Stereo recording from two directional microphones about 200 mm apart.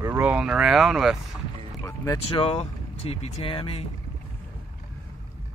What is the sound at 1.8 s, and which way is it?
Speech, 10° left (ahead or behind).